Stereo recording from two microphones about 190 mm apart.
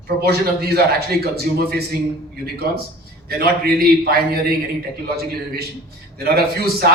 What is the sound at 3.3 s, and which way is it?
A man's voice, 55° right (ahead or behind).